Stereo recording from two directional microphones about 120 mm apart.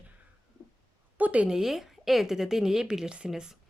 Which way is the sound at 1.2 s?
10° right (ahead or behind).